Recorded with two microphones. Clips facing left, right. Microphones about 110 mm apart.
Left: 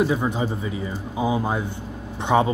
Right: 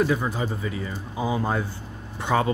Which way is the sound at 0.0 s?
20° left (ahead or behind).